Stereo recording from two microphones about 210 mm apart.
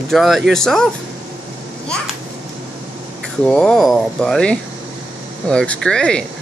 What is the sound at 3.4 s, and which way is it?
Speech, 5° left (ahead or behind).